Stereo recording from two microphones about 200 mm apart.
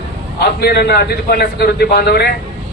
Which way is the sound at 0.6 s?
50° left (ahead or behind).